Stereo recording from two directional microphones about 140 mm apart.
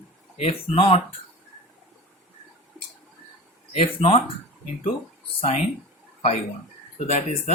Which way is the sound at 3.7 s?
40° left (ahead or behind).